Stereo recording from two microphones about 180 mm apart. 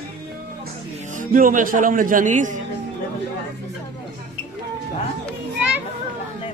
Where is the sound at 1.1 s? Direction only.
50° right (ahead or behind).